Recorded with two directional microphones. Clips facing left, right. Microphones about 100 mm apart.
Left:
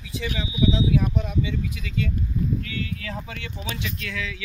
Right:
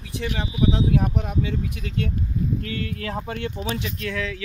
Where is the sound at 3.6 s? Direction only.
35° right (ahead or behind).